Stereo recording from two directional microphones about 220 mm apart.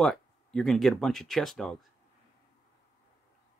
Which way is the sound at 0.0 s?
Centre (ahead or behind).